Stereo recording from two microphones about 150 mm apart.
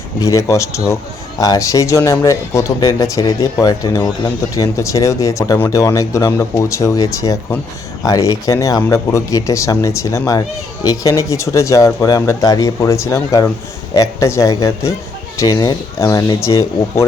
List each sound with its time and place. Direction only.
0.2 s speech: 20° left (ahead or behind)